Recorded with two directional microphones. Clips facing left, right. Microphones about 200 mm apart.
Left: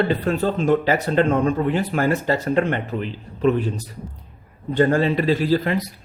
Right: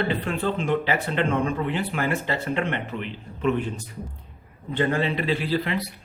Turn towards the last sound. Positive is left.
turn(degrees=45)  # may be behind; listen again after turning